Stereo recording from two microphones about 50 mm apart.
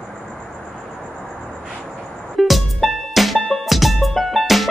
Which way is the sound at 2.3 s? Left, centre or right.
Centre.